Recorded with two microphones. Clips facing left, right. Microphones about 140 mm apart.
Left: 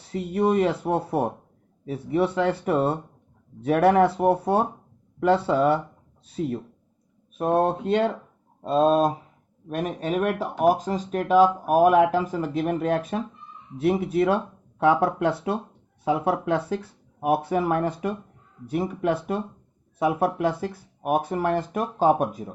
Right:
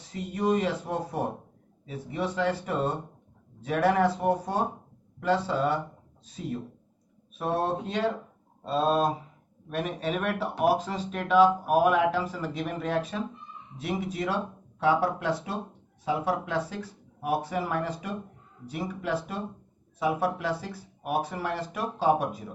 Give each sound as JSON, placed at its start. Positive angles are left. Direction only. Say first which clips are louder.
{"t": 0.0, "sound": "speech", "louder": "left 6 dB", "side_deg": 60}
{"t": 7.3, "sound": "speech", "louder": "left 6 dB", "side_deg": 50}